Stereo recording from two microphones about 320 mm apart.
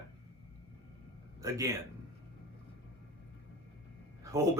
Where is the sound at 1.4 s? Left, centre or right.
Centre.